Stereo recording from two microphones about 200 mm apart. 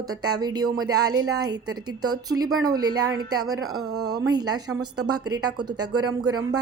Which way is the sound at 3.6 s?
90° right.